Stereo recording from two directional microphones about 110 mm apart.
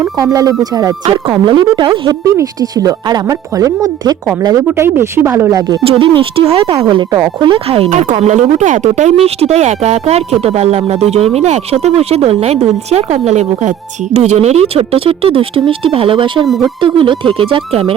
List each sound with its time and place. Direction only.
0.0 s speech: 30° right (ahead or behind)
2.0 s speech: 35° right (ahead or behind)
5.8 s speech: 55° right (ahead or behind)
6.9 s speech: 40° right (ahead or behind)
7.4 s speech: 55° right (ahead or behind); by 9.1 s 90° right
9.2 s speech: 75° right (ahead or behind); by 16.5 s 50° right (ahead or behind)
16.5 s speech: centre (ahead or behind)
16.8 s speech: 50° right (ahead or behind)